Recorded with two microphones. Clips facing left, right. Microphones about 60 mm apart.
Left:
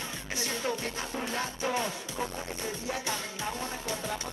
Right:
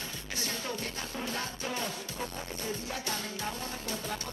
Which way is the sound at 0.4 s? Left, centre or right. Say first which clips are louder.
Left 4 dB; left.